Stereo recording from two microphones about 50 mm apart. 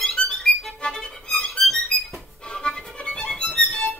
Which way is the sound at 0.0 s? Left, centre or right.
Centre.